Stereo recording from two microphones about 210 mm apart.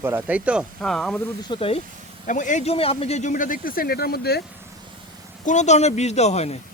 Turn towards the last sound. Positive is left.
turn(degrees=30)  # may be behind; listen again after turning